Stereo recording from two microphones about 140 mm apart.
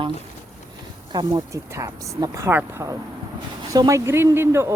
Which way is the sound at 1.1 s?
30° right (ahead or behind).